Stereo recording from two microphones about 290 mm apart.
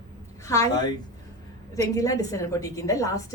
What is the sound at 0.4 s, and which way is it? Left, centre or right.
A woman's voice, centre.